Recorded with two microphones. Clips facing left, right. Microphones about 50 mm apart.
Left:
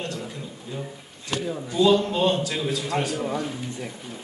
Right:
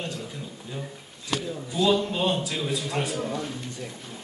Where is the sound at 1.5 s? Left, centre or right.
Left.